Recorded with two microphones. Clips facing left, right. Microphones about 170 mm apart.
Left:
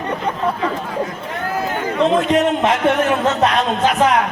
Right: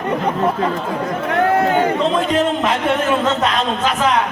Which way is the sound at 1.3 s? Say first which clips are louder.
Right 7 dB; 70° right (ahead or behind).